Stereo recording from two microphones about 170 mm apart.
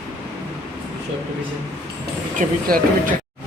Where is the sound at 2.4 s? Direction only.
55° right (ahead or behind).